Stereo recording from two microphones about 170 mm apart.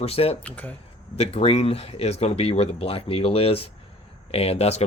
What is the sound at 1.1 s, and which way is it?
Speech, 35° left (ahead or behind).